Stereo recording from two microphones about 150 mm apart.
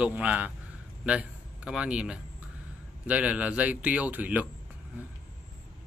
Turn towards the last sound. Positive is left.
turn(degrees=-10)  # may be behind; listen again after turning